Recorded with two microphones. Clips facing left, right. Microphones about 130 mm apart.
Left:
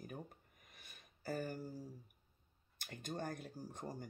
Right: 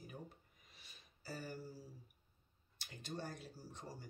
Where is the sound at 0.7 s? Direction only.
50° left (ahead or behind).